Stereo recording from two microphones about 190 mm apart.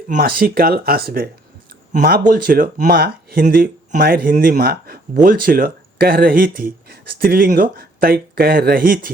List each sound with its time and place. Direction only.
0.2 s speech: 50° right (ahead or behind)